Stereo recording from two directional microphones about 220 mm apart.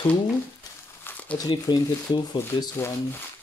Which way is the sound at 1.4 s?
20° left (ahead or behind).